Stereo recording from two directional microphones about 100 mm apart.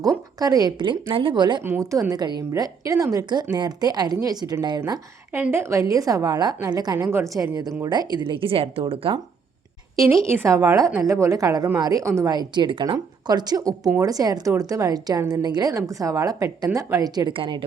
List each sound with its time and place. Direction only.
0.3 s speech: 40° right (ahead or behind)
1.8 s a woman's voice: 35° right (ahead or behind)
5.3 s a woman's voice: 25° right (ahead or behind); by 7.1 s 40° right (ahead or behind)
7.1 s a woman's voice: 25° right (ahead or behind)
7.9 s speech: 45° right (ahead or behind); by 9.1 s 65° right (ahead or behind)
9.9 s a woman's voice: 30° right (ahead or behind)
12.3 s a woman's voice: 45° right (ahead or behind)